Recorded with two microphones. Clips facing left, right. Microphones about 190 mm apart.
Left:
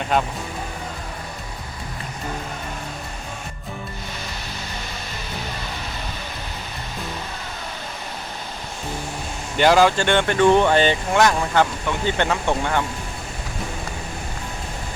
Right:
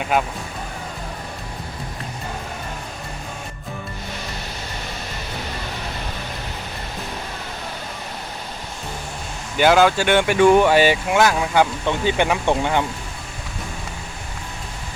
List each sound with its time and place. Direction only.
0.0 s speech: 5° right (ahead or behind)
9.6 s speech: centre (ahead or behind); by 12.8 s 15° right (ahead or behind)